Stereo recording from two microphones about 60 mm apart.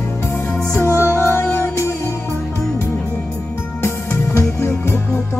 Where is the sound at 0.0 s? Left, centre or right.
Left.